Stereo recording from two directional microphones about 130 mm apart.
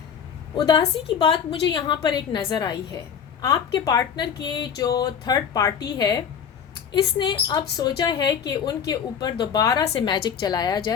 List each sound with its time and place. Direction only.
0.5 s a woman's voice: 35° left (ahead or behind)